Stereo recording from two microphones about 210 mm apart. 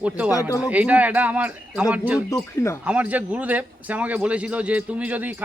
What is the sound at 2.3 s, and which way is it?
Speech, 15° left (ahead or behind).